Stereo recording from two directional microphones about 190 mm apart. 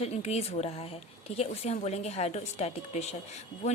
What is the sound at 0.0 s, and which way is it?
Speech, 35° left (ahead or behind).